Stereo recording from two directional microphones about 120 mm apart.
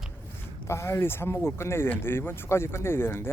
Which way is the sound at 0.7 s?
20° left (ahead or behind).